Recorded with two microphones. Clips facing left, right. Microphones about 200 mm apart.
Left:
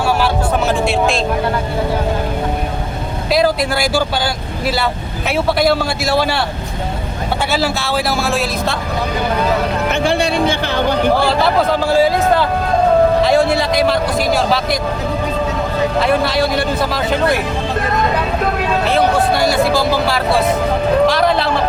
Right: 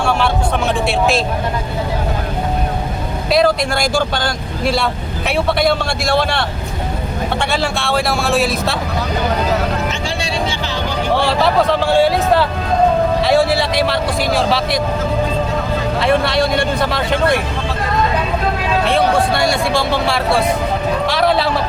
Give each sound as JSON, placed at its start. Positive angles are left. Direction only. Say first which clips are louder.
{"t": 0.9, "sound": "speech", "louder": "even", "side_deg": 0}
{"t": 3.3, "sound": "speech", "louder": "even", "side_deg": 5}
{"t": 5.5, "sound": "speech", "louder": "left 1 dB", "side_deg": 5}
{"t": 7.5, "sound": "speech", "louder": "left 1 dB", "side_deg": 5}
{"t": 9.9, "sound": "music", "louder": "left 6 dB", "side_deg": 60}
{"t": 11.2, "sound": "speech", "louder": "even", "side_deg": 0}
{"t": 16.0, "sound": "speech", "louder": "right 1 dB", "side_deg": 0}
{"t": 18.9, "sound": "speech", "louder": "even", "side_deg": 0}